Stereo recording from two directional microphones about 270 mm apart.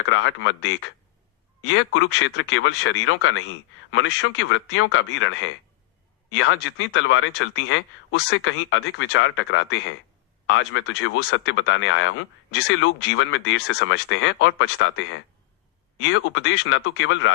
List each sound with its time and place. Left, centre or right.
0.0 s speech: left